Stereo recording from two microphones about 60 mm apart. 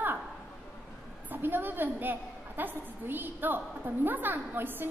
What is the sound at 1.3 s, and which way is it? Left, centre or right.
A woman's voice, right.